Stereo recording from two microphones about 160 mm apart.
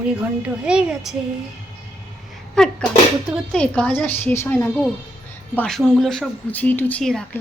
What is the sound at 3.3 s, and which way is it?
Speech, 5° left (ahead or behind).